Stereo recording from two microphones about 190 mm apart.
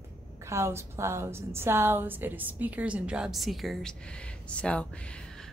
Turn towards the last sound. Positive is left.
turn(degrees=5)  # may be behind; listen again after turning